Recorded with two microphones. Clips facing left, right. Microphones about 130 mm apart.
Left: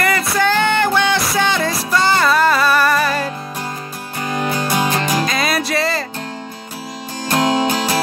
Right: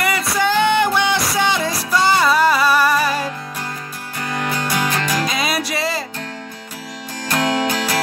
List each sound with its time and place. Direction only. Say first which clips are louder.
0.0 s music: left 2 dB; 10° right (ahead or behind)
4.2 s music: left 3 dB; 20° left (ahead or behind)
5.2 s music: left 2 dB; 5° right (ahead or behind)
7.2 s music: left 3 dB; 20° left (ahead or behind)